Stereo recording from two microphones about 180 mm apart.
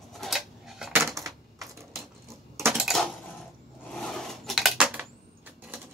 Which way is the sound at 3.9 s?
5° left (ahead or behind).